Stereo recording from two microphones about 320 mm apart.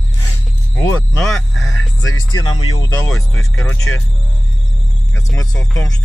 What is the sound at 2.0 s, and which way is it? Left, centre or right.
Speech, left.